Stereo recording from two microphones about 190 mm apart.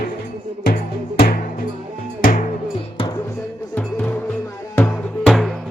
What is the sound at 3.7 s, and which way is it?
Music, 5° left (ahead or behind).